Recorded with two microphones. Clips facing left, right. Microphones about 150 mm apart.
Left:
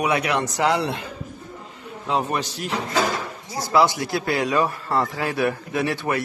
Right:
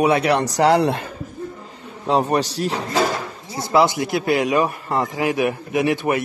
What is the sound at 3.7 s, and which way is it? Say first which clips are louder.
Speech: right 2 dB; 20° right (ahead or behind).